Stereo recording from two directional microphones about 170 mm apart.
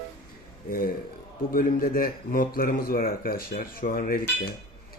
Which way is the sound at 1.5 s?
55° left (ahead or behind).